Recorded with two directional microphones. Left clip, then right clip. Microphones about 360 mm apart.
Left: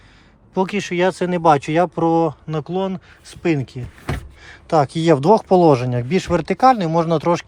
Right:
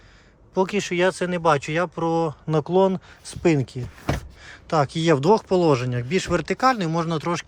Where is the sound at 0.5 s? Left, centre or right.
Centre.